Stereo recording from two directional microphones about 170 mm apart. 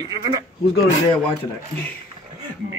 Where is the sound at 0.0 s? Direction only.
20° right (ahead or behind).